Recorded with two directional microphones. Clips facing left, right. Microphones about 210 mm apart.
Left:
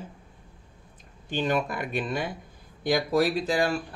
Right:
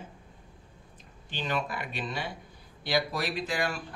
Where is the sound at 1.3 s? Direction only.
50° left (ahead or behind).